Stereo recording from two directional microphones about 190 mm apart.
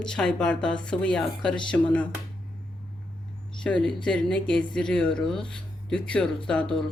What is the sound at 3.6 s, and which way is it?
Speech, 5° left (ahead or behind).